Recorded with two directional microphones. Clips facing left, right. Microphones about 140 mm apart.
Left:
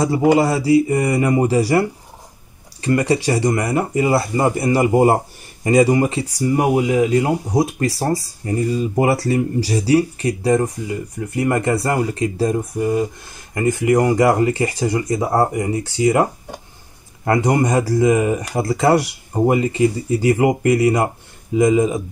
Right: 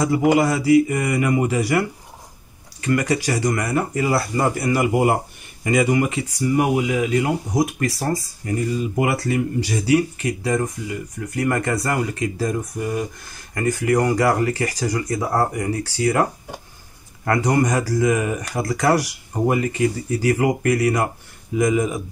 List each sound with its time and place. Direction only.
0.0 s speech: 30° left (ahead or behind)